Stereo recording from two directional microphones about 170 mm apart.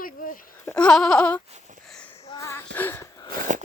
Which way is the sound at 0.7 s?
5° left (ahead or behind).